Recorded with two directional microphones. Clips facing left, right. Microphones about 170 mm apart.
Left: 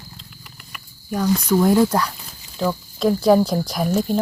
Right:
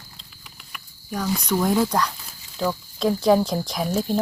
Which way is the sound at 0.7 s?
Centre (ahead or behind).